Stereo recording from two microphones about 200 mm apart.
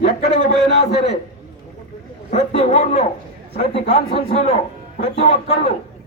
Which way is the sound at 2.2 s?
30° left (ahead or behind).